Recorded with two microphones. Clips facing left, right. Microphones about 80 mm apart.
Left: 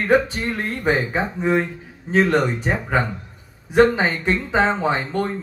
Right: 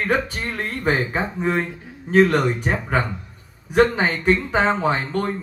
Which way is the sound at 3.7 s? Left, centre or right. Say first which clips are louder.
Left 2 dB; centre.